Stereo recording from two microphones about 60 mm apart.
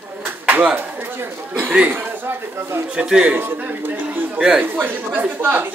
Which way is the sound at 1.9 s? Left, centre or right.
Right.